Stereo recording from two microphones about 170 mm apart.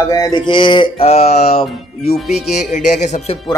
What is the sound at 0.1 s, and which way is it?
Mantra, 25° left (ahead or behind).